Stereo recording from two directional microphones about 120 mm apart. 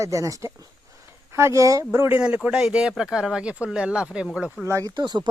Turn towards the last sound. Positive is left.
turn(degrees=-35)  # may be behind; listen again after turning